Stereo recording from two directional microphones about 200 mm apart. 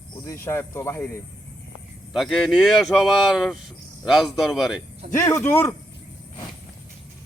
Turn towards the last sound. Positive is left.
turn(degrees=10)  # may be behind; listen again after turning